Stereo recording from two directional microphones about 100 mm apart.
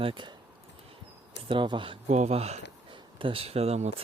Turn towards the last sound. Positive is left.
turn(degrees=-90)